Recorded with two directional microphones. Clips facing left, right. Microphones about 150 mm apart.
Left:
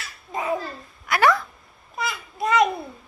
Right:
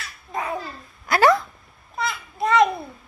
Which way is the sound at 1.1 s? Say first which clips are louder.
Right 3 dB; 30° right (ahead or behind).